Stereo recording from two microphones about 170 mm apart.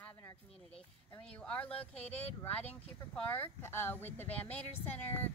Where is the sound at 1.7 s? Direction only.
40° left (ahead or behind).